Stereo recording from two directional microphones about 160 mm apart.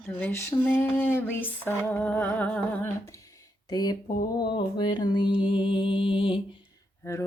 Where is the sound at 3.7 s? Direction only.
25° left (ahead or behind).